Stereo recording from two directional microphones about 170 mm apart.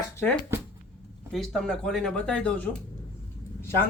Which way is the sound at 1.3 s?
5° left (ahead or behind).